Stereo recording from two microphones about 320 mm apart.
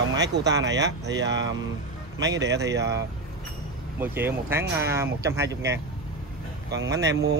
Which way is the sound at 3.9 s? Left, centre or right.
Centre.